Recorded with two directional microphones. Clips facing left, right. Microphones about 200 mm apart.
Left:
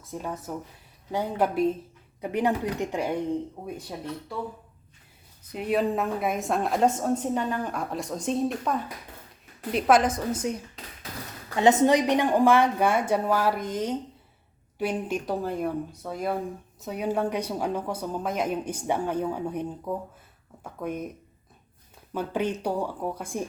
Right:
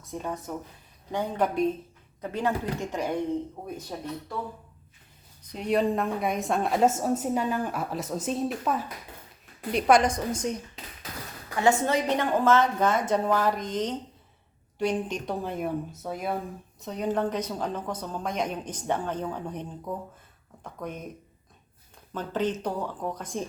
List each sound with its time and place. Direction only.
0.1 s a woman's voice: 5° left (ahead or behind)
5.5 s a woman's voice: 5° left (ahead or behind)
11.5 s a woman's voice: 20° left (ahead or behind)
22.1 s a woman's voice: 10° left (ahead or behind)